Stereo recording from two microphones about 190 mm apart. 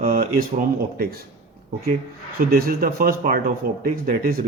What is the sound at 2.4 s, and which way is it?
A man's voice, 50° right (ahead or behind).